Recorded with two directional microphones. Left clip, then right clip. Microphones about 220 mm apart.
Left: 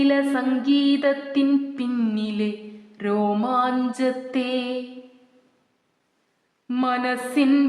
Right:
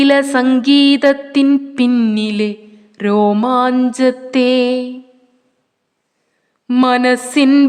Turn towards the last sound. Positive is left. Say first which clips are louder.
# right 9 dB
turn(degrees=-45)  # may be behind; listen again after turning